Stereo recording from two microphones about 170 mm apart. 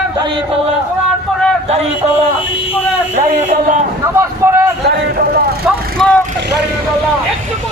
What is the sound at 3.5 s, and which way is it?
Speech, 45° right (ahead or behind).